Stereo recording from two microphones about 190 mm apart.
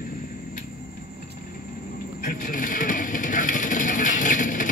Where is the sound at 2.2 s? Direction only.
45° left (ahead or behind).